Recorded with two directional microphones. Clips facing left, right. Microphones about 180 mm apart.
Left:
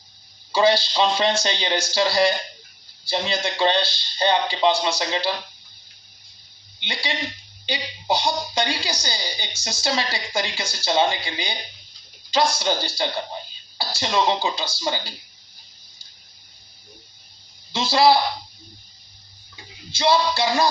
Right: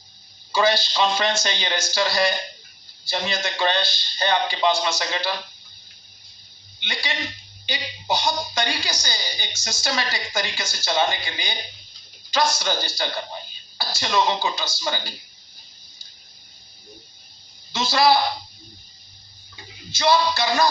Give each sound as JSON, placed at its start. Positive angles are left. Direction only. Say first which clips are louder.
{"t": 0.5, "sound": "a woman's voice", "louder": "left 2 dB", "side_deg": 30}
{"t": 6.7, "sound": "a man's voice", "louder": "left 2 dB", "side_deg": 30}
{"t": 17.7, "sound": "a woman's voice", "louder": "left 2 dB", "side_deg": 30}
{"t": 20.0, "sound": "speech", "louder": "even", "side_deg": 30}